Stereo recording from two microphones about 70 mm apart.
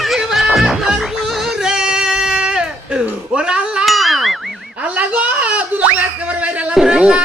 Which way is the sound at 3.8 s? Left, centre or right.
Centre.